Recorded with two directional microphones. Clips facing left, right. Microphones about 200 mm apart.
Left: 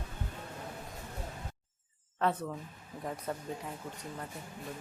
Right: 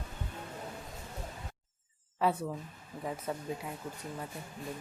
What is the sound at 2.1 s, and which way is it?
Speech, 10° right (ahead or behind).